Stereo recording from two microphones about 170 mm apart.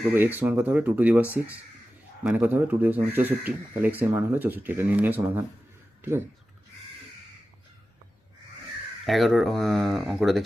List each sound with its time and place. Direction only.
0.1 s speech: 10° right (ahead or behind)
9.0 s speech: centre (ahead or behind)